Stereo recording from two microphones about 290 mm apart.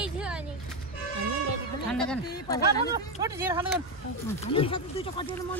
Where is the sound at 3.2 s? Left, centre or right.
Centre.